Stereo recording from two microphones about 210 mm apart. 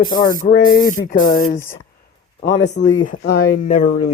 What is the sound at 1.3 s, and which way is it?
Speech, 40° left (ahead or behind).